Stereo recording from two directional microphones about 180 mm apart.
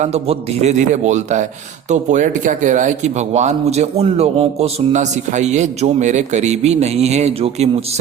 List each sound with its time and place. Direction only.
0.0 s speech: 35° right (ahead or behind)